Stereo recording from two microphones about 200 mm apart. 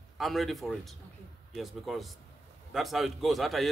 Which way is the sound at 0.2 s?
Centre (ahead or behind).